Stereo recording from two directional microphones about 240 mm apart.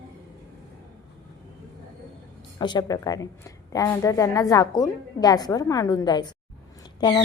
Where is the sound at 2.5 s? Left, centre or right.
Centre.